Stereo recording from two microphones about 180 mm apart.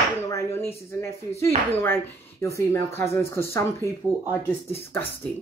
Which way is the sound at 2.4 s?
15° left (ahead or behind).